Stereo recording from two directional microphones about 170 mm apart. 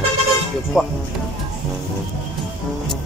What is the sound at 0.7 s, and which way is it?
Speech, 5° right (ahead or behind).